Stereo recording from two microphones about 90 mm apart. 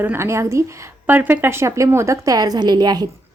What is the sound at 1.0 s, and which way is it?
A woman's voice, 20° right (ahead or behind).